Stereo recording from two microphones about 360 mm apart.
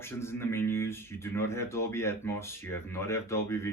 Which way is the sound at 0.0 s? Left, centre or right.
Centre.